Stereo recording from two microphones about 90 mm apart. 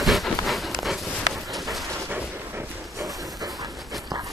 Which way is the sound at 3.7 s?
Centre (ahead or behind).